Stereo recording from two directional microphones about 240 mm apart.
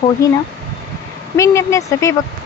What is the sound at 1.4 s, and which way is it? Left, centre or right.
Speech, centre.